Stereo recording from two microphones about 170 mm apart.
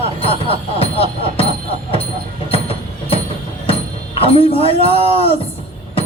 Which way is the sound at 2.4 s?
35° left (ahead or behind).